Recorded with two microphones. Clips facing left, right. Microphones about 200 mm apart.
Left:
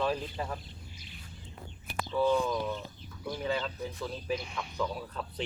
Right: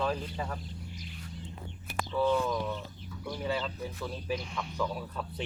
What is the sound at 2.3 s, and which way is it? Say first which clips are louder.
Speech: left 1 dB; centre (ahead or behind).